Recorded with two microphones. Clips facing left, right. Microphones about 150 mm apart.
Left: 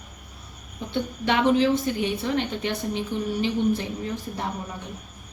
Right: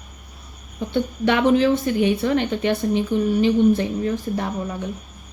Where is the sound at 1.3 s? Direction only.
55° right (ahead or behind).